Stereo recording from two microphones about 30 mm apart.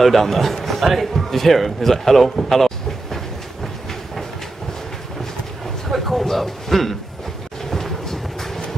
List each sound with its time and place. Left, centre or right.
0.0 s a man's voice: centre
5.9 s a sound: centre
7.7 s vehicle: centre